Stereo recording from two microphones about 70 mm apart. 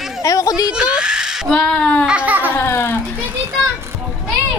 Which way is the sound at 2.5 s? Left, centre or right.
Left.